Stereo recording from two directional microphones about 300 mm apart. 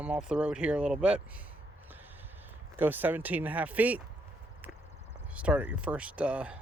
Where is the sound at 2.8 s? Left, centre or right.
Centre.